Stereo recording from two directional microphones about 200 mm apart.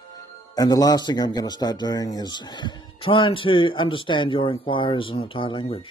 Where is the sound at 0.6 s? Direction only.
20° left (ahead or behind).